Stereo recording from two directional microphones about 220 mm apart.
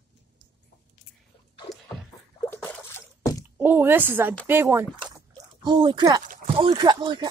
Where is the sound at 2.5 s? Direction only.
10° left (ahead or behind).